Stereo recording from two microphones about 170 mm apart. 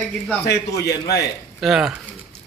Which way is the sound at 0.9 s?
70° left (ahead or behind).